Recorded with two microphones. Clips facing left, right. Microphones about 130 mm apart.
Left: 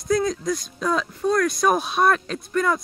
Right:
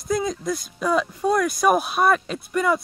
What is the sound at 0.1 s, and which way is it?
Speech, 5° right (ahead or behind).